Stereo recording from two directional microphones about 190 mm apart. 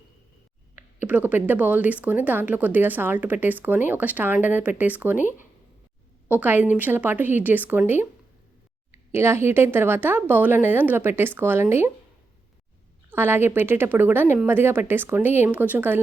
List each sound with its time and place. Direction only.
1.0 s speech: 10° right (ahead or behind)
5.1 s speech: 40° left (ahead or behind)
6.2 s speech: 10° right (ahead or behind)
13.1 s speech: 10° right (ahead or behind)